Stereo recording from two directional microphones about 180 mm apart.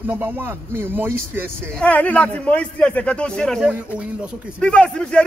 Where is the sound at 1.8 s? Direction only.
10° left (ahead or behind).